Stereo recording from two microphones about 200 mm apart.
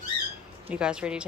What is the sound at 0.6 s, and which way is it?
Speech, 5° right (ahead or behind).